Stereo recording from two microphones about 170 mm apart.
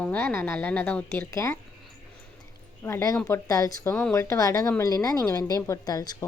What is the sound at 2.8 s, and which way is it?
Speech, 15° left (ahead or behind).